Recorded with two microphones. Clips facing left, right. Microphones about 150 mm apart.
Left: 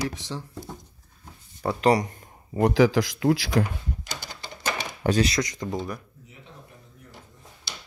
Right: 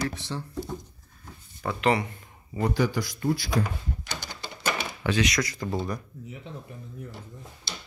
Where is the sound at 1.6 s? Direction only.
35° left (ahead or behind).